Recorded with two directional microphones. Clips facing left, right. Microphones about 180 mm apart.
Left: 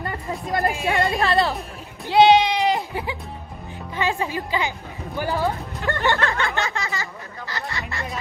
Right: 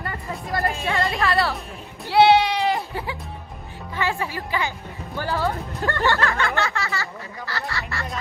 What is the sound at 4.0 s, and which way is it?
A woman's voice, 20° left (ahead or behind).